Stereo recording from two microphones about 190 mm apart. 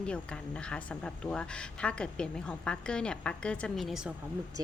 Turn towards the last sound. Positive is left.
turn(degrees=-20)  # may be behind; listen again after turning